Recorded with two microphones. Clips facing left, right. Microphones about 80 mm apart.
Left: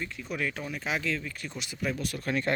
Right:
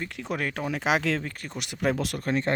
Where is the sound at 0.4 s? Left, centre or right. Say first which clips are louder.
Right 2 dB; right.